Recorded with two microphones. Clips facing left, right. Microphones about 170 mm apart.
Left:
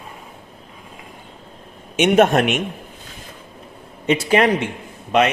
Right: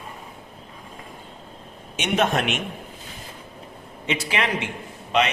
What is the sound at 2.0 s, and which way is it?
Speech, 55° left (ahead or behind).